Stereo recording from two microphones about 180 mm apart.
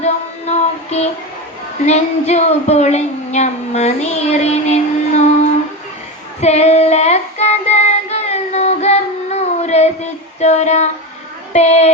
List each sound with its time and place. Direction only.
0.0 s music: 40° left (ahead or behind)
1.8 s a woman's voice: 35° left (ahead or behind)
6.4 s child singing: 35° left (ahead or behind)
10.4 s female singing: 40° left (ahead or behind)
11.5 s a sound: 40° left (ahead or behind)